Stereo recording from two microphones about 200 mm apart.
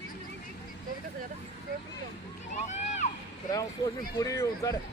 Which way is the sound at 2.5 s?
35° left (ahead or behind).